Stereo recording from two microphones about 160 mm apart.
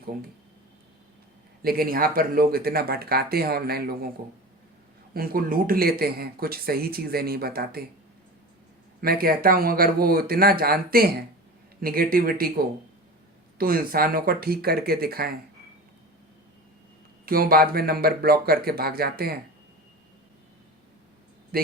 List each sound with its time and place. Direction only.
1.6 s speech: 65° right (ahead or behind)
5.1 s speech: 65° right (ahead or behind)
9.0 s speech: 65° right (ahead or behind)
13.6 s speech: 65° right (ahead or behind)
17.2 s speech: 65° right (ahead or behind)
21.5 s a sound: 70° right (ahead or behind)